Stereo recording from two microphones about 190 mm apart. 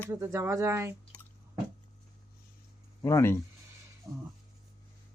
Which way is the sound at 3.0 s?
15° left (ahead or behind).